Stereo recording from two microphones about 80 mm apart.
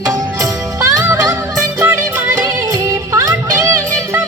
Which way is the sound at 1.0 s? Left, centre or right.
Right.